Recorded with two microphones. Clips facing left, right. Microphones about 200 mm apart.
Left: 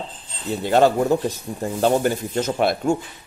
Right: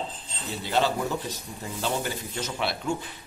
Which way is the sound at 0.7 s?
50° left (ahead or behind).